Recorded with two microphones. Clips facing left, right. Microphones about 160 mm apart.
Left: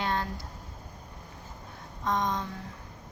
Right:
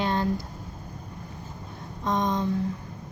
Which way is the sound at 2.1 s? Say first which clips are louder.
Right 3 dB; 20° right (ahead or behind).